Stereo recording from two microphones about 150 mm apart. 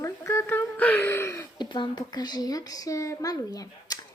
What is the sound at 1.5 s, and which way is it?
Speech, 30° left (ahead or behind).